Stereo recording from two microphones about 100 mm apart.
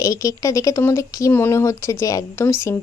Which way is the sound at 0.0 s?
35° left (ahead or behind).